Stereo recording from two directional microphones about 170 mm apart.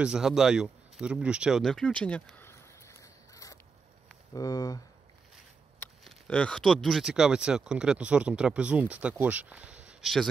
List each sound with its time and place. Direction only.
0.0 s speech: 5° right (ahead or behind); by 4.8 s 20° left (ahead or behind)
6.0 s speech: 5° left (ahead or behind)